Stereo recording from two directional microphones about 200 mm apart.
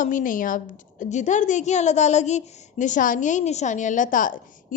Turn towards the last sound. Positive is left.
turn(degrees=40)  # may be behind; listen again after turning